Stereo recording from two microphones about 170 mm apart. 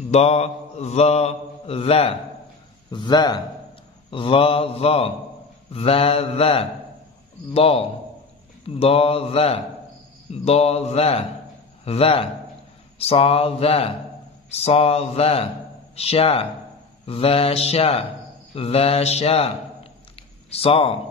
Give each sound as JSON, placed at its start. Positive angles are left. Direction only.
{"t": 0.1, "sound": "mantra", "side_deg": 40}
{"t": 2.9, "sound": "speech", "side_deg": 25}
{"t": 4.1, "sound": "mantra", "side_deg": 30}
{"t": 18.5, "sound": "a man's voice", "side_deg": 35}
{"t": 20.5, "sound": "mantra", "side_deg": 35}